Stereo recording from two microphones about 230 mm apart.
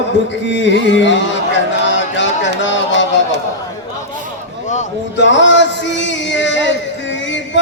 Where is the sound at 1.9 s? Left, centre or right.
Left.